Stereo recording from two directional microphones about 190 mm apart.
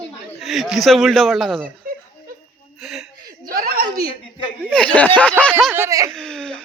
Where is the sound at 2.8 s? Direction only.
Centre (ahead or behind).